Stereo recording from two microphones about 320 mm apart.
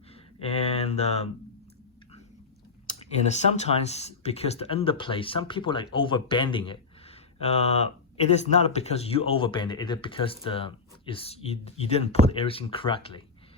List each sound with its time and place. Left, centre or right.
0.3 s speech: centre
2.8 s speech: left